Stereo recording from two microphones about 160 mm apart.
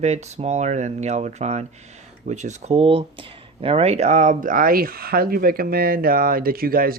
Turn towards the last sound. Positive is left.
turn(degrees=-65)  # may be behind; listen again after turning